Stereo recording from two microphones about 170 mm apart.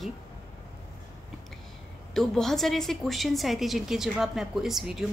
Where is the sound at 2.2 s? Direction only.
Centre (ahead or behind).